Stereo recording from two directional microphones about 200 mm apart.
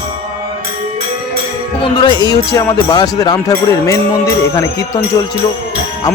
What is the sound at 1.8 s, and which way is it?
Music, 20° left (ahead or behind).